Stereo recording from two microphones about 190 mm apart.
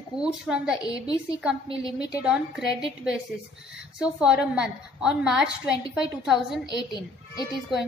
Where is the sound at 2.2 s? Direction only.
5° right (ahead or behind).